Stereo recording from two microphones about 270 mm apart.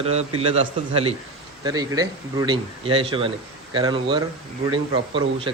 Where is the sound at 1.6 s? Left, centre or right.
Centre.